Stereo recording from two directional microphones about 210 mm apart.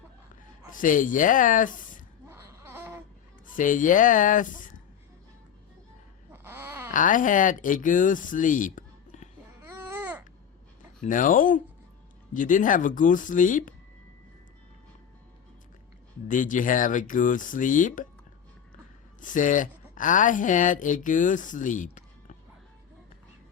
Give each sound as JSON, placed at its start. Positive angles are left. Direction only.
{"t": 0.8, "sound": "speech", "side_deg": 40}
{"t": 2.3, "sound": "baby cry", "side_deg": -10}
{"t": 3.4, "sound": "speech", "side_deg": 40}
{"t": 6.3, "sound": "a sound", "side_deg": -10}
{"t": 6.9, "sound": "speech", "side_deg": 40}
{"t": 9.6, "sound": "babbling", "side_deg": -10}
{"t": 11.0, "sound": "speech", "side_deg": 40}
{"t": 16.3, "sound": "speech", "side_deg": 40}
{"t": 19.2, "sound": "speech", "side_deg": 40}